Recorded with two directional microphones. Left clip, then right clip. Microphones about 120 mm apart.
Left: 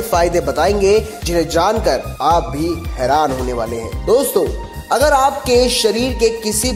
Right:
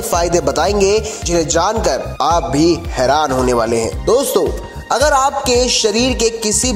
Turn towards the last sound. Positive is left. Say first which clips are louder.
# even
turn(degrees=-15)  # may be behind; listen again after turning